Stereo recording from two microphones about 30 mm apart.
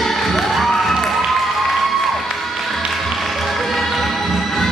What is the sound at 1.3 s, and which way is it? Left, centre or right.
Music, centre.